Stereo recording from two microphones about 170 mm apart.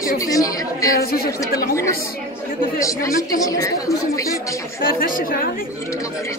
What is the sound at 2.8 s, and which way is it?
A woman's voice, 20° left (ahead or behind).